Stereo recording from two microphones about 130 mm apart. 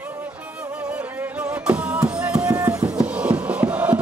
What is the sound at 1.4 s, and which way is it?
Music, 10° right (ahead or behind).